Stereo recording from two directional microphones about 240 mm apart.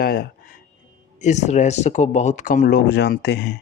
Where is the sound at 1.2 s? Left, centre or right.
Left.